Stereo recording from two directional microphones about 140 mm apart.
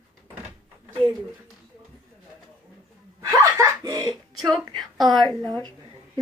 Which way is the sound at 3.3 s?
25° right (ahead or behind).